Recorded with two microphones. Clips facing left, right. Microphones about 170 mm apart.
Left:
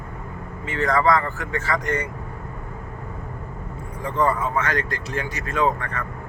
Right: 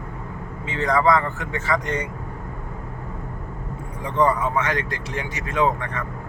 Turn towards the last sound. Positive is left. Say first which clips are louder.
# right 1 dB
turn(degrees=-20)  # may be behind; listen again after turning